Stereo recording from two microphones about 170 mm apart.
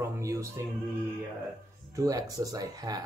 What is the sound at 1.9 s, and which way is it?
Speech, 20° right (ahead or behind).